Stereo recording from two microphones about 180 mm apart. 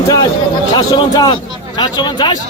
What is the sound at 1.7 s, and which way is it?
Speech, 25° left (ahead or behind).